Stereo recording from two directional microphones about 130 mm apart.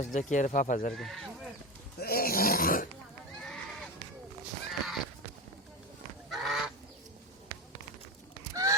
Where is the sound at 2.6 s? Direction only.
90° left.